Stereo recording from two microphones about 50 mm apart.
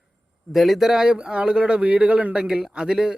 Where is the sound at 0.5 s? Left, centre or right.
Centre.